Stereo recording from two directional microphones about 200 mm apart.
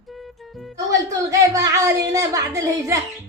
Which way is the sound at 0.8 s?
15° right (ahead or behind).